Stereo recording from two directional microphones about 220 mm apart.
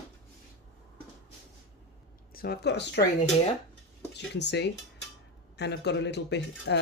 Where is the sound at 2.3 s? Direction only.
45° left (ahead or behind).